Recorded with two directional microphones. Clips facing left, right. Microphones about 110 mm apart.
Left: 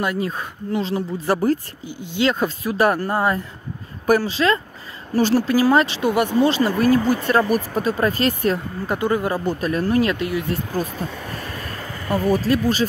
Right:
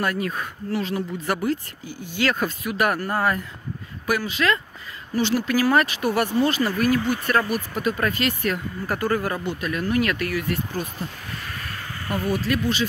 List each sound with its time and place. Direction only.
0.0 s speech: 25° left (ahead or behind)
1.9 s speech: 20° left (ahead or behind)
4.0 s speech: 35° left (ahead or behind)
8.8 s speech: 20° left (ahead or behind)
9.4 s speech: 40° left (ahead or behind); by 10.6 s 20° left (ahead or behind)
12.3 s speech: 40° left (ahead or behind)